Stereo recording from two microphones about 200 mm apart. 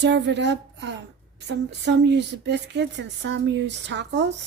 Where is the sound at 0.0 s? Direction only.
60° right (ahead or behind).